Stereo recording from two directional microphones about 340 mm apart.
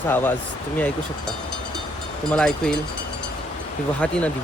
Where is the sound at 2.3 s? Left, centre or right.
Centre.